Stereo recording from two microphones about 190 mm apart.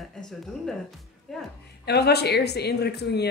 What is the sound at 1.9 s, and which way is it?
Speech, 60° left (ahead or behind).